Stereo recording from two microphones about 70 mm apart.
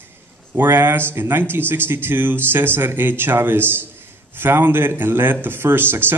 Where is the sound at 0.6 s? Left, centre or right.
Right.